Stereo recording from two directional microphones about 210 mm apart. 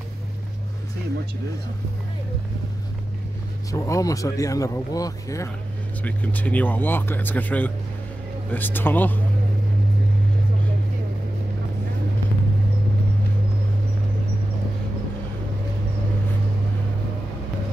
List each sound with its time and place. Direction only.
3.7 s speech: 15° left (ahead or behind)